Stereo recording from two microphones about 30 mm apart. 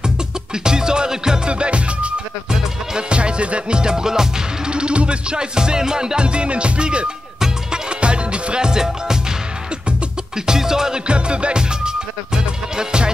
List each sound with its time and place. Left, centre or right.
0.7 s music: right
1.5 s music: right
3.8 s music: right
4.6 s music: right
6.1 s music: right; by 9.2 s centre
10.4 s music: centre
11.1 s music: right